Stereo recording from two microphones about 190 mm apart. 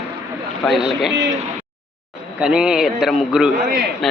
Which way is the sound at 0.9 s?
Centre (ahead or behind).